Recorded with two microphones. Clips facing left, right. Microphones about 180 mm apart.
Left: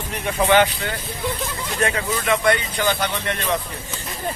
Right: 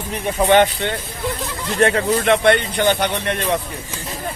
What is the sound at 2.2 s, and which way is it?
Speech, 60° right (ahead or behind).